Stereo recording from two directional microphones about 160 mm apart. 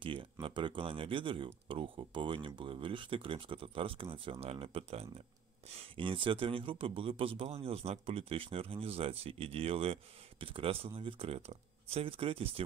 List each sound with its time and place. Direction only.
0.0 s speech: 35° right (ahead or behind)